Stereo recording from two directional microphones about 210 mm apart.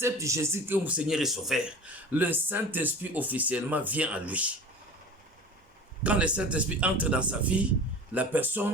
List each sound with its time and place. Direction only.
0.0 s speech: 15° right (ahead or behind)
6.0 s a man's voice: 5° right (ahead or behind)